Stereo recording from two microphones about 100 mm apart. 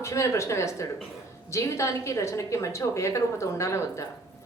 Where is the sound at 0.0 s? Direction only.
30° left (ahead or behind).